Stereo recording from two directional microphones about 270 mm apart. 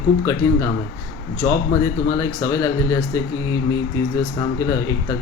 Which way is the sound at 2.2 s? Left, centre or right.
Centre.